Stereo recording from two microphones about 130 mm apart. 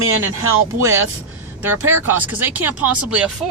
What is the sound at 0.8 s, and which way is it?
Speech, 25° right (ahead or behind).